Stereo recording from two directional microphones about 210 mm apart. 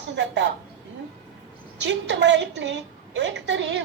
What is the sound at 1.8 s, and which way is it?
A woman's voice, 55° right (ahead or behind).